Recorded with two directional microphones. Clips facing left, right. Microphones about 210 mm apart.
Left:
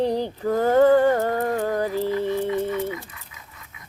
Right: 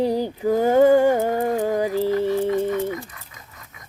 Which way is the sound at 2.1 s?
45° right (ahead or behind).